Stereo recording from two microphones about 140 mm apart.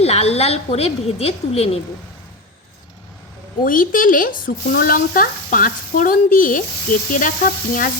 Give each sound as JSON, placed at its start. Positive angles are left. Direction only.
{"t": 0.0, "sound": "a woman's voice", "side_deg": 50}
{"t": 3.6, "sound": "speech", "side_deg": 80}